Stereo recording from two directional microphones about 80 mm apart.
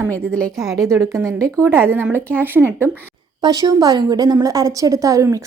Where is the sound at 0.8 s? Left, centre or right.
Right.